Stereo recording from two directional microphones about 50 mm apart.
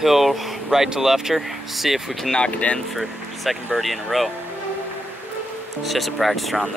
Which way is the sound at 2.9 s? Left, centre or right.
Centre.